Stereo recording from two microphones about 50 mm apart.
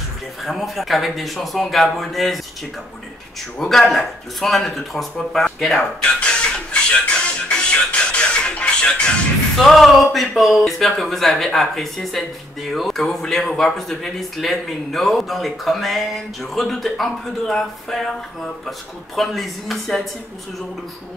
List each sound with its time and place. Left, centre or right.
0.4 s speech: centre
3.5 s speech: centre
6.0 s music: left
9.6 s speech: centre